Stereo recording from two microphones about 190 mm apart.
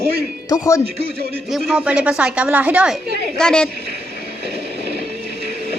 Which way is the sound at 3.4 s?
5° left (ahead or behind).